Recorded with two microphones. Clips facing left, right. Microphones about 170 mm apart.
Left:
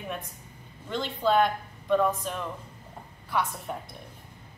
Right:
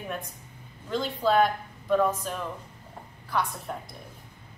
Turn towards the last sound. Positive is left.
turn(degrees=0)  # may be behind; listen again after turning